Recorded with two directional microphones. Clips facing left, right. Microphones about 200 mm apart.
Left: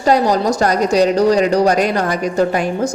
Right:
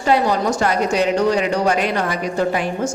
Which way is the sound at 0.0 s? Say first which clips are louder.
Left 3 dB; 40° left (ahead or behind).